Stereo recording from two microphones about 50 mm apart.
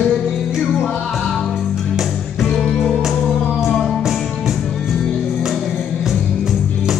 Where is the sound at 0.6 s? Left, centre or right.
Centre.